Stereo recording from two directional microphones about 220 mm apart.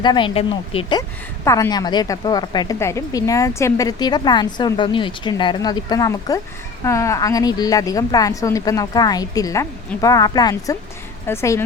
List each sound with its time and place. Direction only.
0.0 s a woman's voice: 20° left (ahead or behind)